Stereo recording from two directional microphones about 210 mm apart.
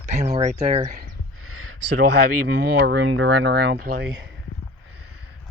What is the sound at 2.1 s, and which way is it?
Speech, 50° right (ahead or behind).